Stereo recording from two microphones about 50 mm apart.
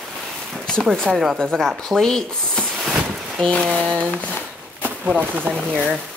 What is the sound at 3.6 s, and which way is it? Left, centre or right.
Speech, right.